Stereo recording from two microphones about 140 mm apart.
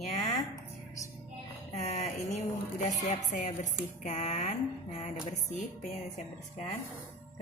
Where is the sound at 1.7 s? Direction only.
50° left (ahead or behind).